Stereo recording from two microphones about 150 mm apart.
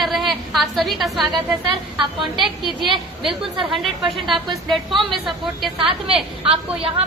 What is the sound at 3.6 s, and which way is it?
Speech, 35° right (ahead or behind).